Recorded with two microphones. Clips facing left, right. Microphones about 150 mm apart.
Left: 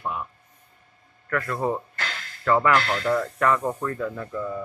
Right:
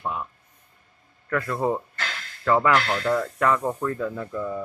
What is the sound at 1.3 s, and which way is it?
Speech, 15° right (ahead or behind).